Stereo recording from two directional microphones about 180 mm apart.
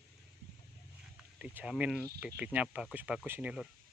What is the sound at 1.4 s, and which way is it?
Speech, 5° right (ahead or behind).